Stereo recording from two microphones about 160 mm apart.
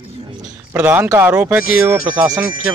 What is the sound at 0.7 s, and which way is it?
Speech, 10° right (ahead or behind).